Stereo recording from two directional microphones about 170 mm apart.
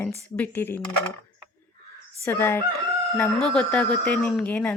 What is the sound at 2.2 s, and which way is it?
Speech, 15° left (ahead or behind).